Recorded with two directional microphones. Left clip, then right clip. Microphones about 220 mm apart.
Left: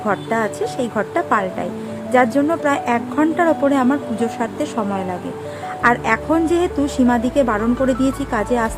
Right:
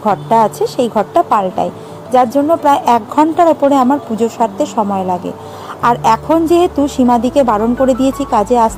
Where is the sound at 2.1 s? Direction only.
15° right (ahead or behind).